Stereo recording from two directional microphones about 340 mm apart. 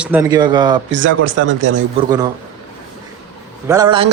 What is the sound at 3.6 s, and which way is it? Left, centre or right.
Speech, centre.